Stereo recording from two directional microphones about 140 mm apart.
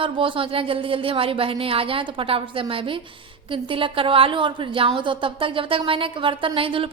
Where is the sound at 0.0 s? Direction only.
40° right (ahead or behind).